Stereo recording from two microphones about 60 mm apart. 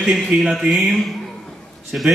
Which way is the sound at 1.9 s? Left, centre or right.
Centre.